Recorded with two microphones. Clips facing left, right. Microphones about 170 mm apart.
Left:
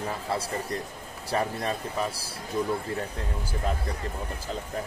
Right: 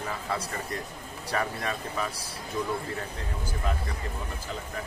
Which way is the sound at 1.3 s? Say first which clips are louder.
Left 3 dB; 30° left (ahead or behind).